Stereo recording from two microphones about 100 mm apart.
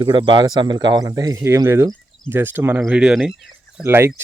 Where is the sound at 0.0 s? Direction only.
55° right (ahead or behind); by 3.8 s 5° right (ahead or behind).